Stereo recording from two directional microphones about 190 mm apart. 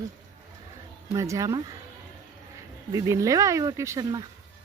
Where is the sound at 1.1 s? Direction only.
15° right (ahead or behind).